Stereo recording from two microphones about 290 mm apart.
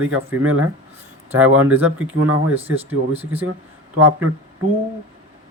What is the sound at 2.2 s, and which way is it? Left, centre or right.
Speech, right.